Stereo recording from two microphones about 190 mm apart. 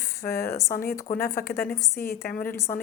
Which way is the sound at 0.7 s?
55° left (ahead or behind).